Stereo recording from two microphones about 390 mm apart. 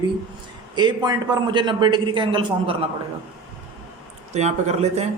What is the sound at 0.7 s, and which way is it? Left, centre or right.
A man's voice, centre.